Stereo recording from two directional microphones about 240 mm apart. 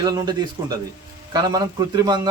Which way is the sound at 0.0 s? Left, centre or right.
Centre.